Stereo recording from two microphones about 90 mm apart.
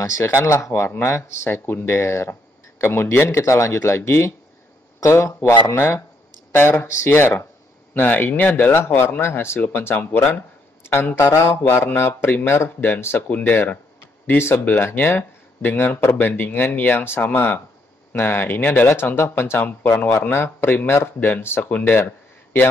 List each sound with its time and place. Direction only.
0.0 s a man's voice: 30° left (ahead or behind)